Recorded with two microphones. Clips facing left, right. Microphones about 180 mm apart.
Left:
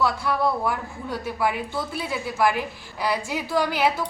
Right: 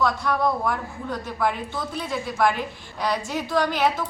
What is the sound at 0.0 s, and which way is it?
A man's voice, 5° left (ahead or behind).